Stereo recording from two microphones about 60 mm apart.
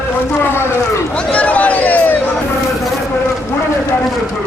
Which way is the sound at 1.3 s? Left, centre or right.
Left.